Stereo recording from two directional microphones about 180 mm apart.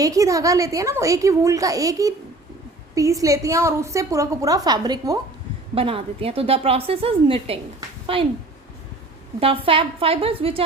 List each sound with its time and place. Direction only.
0.0 s a woman's voice: 20° right (ahead or behind)
9.4 s a woman's voice: 30° right (ahead or behind)